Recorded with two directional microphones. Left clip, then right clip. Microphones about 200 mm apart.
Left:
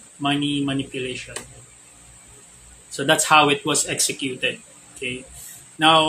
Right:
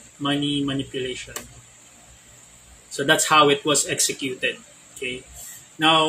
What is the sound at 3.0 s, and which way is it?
Speech, 15° left (ahead or behind).